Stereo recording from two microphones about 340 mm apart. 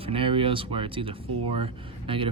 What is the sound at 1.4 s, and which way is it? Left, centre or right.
Speech, right.